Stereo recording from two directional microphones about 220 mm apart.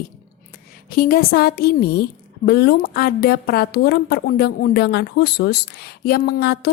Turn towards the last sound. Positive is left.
turn(degrees=45)  # may be behind; listen again after turning